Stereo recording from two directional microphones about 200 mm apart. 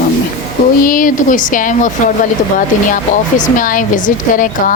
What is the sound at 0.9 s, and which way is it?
A woman's voice, 40° left (ahead or behind).